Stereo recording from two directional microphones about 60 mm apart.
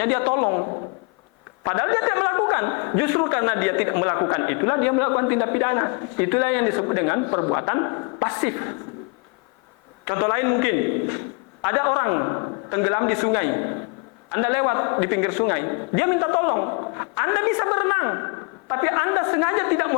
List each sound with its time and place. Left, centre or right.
0.0 s a man's voice: left
10.1 s a man's voice: left